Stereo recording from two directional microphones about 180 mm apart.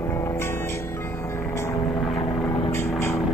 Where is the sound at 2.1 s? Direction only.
25° left (ahead or behind).